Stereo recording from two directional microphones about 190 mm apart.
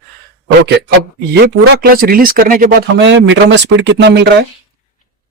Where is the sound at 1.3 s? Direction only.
60° right (ahead or behind).